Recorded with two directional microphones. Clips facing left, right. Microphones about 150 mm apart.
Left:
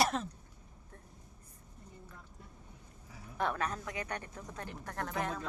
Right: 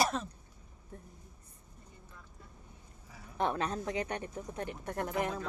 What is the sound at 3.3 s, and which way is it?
Speech, 25° right (ahead or behind).